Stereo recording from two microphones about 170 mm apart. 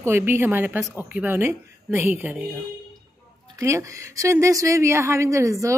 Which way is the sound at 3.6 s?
15° right (ahead or behind).